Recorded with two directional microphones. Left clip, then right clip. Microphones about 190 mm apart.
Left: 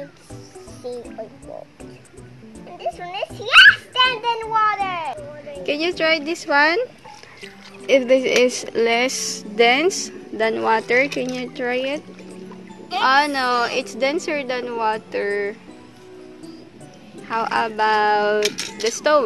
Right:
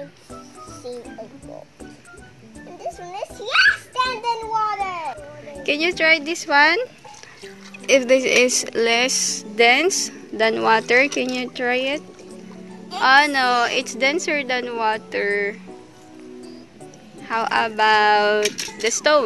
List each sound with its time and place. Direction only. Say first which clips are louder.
0.8 s speech: left 3 dB; centre (ahead or behind)
2.8 s children playing: left 4 dB; centre (ahead or behind)
7.4 s speech: right 1 dB; centre (ahead or behind)
13.0 s a woman's voice: right 2 dB; 10° right (ahead or behind)
17.3 s a woman's voice: right 1 dB; 5° right (ahead or behind)